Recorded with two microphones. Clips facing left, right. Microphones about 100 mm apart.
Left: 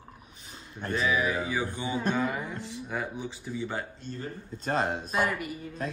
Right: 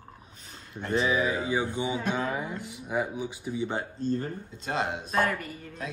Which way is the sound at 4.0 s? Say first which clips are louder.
Right 10 dB; 40° right (ahead or behind).